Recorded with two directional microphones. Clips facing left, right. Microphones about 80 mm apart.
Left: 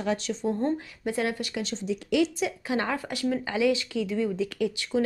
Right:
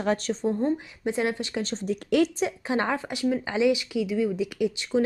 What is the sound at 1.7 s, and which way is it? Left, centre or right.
Speech, right.